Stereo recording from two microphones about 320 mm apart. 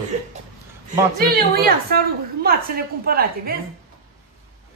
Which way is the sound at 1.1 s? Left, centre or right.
Right.